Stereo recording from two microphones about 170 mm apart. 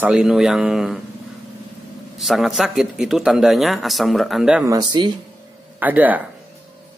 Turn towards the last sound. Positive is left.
turn(degrees=-10)  # may be behind; listen again after turning